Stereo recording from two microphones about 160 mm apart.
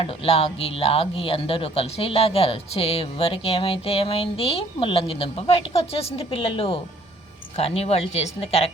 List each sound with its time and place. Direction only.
0.0 s speech: 35° left (ahead or behind)